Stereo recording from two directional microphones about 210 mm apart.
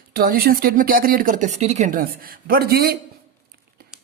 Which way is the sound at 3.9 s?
5° right (ahead or behind).